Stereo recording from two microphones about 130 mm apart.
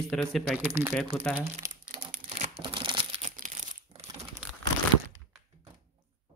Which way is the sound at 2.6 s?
40° right (ahead or behind).